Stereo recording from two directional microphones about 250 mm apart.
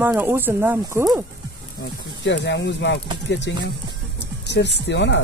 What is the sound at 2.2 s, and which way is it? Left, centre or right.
Speech, left.